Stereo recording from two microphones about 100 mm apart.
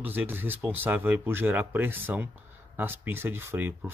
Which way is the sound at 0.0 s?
20° right (ahead or behind).